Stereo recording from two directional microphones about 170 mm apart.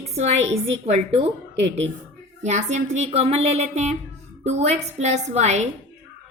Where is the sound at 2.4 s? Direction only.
45° right (ahead or behind).